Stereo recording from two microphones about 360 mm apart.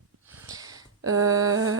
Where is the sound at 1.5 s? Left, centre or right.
Right.